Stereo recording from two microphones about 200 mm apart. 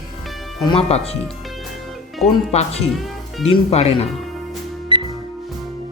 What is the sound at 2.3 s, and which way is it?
Speech, 30° left (ahead or behind).